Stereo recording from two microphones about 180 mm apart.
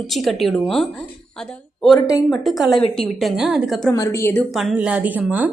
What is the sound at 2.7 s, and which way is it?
Speech, 30° left (ahead or behind).